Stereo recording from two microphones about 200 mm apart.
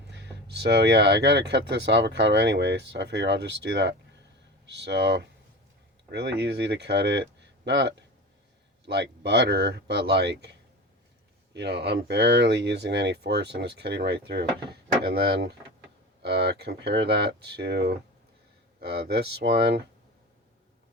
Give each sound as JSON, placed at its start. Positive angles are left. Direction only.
{"t": 0.1, "sound": "speech", "side_deg": -60}
{"t": 11.5, "sound": "speech", "side_deg": -55}